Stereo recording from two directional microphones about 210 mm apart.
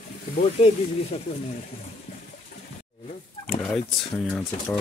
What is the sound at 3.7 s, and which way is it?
Speech, 5° left (ahead or behind).